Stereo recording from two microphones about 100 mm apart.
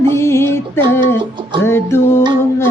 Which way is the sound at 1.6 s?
25° left (ahead or behind).